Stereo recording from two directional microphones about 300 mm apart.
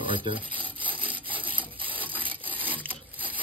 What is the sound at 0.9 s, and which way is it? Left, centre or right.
Wood, centre.